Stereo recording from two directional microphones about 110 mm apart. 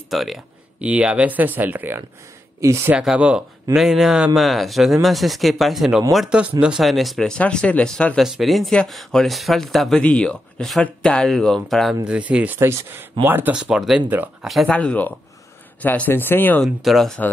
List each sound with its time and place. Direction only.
0.1 s speech: centre (ahead or behind); by 2.9 s 25° right (ahead or behind)
2.9 s speech: 10° right (ahead or behind); by 8.2 s 10° left (ahead or behind)
8.2 s speech: centre (ahead or behind)
12.1 s speech: 10° right (ahead or behind)
12.5 s speech: 25° right (ahead or behind)
13.6 s speech: 5° right (ahead or behind)
14.0 s speech: 15° right (ahead or behind)
14.4 s speech: centre (ahead or behind)
14.7 s speech: 10° left (ahead or behind)
16.6 s speech: centre (ahead or behind)